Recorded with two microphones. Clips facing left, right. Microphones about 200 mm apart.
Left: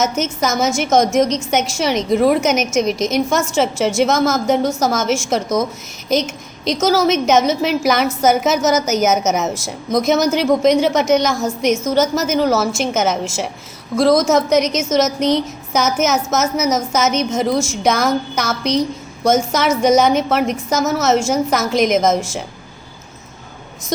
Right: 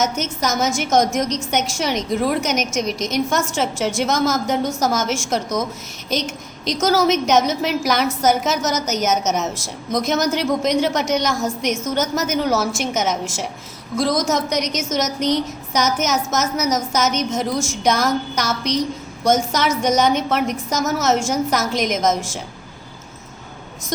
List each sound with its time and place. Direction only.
0.0 s a woman's voice: 5° left (ahead or behind)